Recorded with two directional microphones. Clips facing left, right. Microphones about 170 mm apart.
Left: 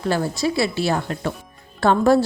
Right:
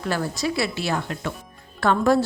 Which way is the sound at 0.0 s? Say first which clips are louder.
Left 4 dB; 30° left (ahead or behind).